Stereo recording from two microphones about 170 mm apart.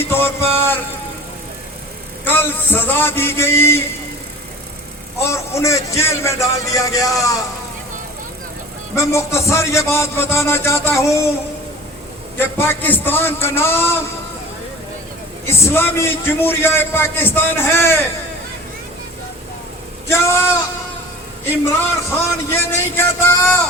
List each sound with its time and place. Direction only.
0.1 s music: 15° left (ahead or behind)
2.2 s a man's voice: 10° left (ahead or behind)
5.2 s a man's voice: 15° left (ahead or behind)
9.0 s a man's voice: 15° left (ahead or behind)
12.4 s a man's voice: 15° left (ahead or behind)
15.4 s a man's voice: 15° left (ahead or behind)
20.1 s a man's voice: 15° left (ahead or behind)
21.7 s a man's voice: 15° left (ahead or behind)